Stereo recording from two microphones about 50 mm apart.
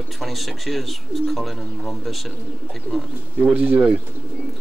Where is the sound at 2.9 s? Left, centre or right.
Left.